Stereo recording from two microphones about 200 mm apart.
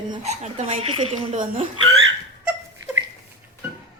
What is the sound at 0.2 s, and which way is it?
Speech, 35° right (ahead or behind).